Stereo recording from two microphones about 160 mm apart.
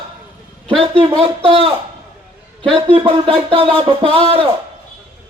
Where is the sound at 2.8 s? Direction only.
35° right (ahead or behind).